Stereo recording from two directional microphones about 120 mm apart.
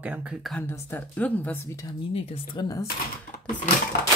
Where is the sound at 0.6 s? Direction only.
20° left (ahead or behind).